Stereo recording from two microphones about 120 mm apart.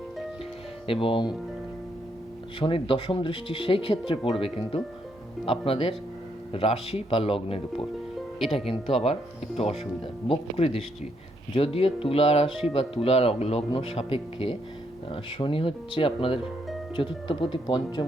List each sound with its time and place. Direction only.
0.9 s speech: 50° left (ahead or behind)
2.6 s speech: 45° left (ahead or behind)